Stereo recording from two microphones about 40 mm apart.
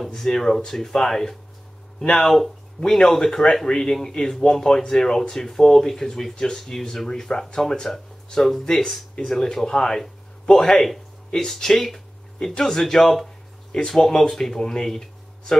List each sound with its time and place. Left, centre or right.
0.1 s speech: centre
2.0 s speech: left
2.2 s speech: centre
13.7 s speech: centre
13.9 s speech: centre